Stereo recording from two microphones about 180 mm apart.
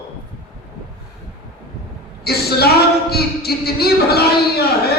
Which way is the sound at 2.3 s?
60° left (ahead or behind).